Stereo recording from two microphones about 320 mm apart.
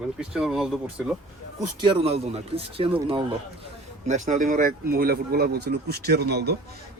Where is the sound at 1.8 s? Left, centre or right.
Centre.